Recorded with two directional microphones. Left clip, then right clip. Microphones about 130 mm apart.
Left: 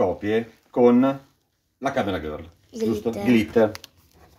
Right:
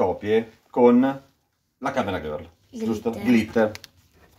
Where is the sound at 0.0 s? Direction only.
25° right (ahead or behind).